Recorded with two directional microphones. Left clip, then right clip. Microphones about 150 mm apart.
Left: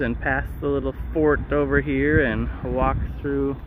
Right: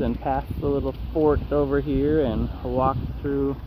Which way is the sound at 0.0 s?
25° left (ahead or behind).